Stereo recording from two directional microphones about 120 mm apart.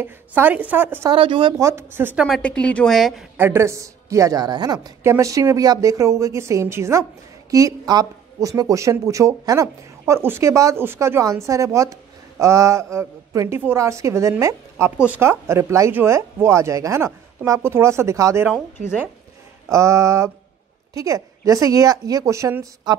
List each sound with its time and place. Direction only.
0.0 s a woman's voice: 15° right (ahead or behind)
1.1 s speech: 45° right (ahead or behind)
1.6 s a woman's voice: 20° right (ahead or behind)
2.1 s a woman's voice: centre (ahead or behind)
3.3 s a woman's voice: 20° right (ahead or behind)
15.0 s a woman's voice: 10° right (ahead or behind)
15.2 s a woman's voice: 20° right (ahead or behind)
19.7 s a woman's voice: 25° right (ahead or behind)